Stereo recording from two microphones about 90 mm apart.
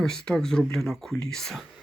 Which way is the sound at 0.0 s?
5° left (ahead or behind).